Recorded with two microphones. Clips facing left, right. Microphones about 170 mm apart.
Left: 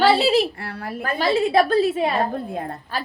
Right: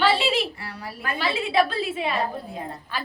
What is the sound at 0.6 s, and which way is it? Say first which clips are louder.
Speech: left 5 dB; 55° left (ahead or behind).